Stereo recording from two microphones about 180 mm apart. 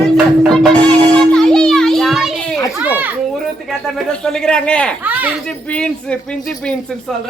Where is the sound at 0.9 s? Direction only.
25° right (ahead or behind).